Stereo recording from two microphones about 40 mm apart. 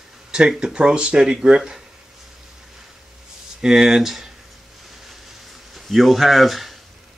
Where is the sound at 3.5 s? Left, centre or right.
Centre.